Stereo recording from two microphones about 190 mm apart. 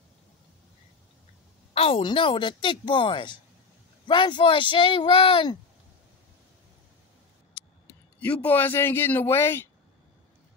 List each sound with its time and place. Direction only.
1.7 s a woman's voice: 30° left (ahead or behind)
7.8 s a man's voice: 10° left (ahead or behind)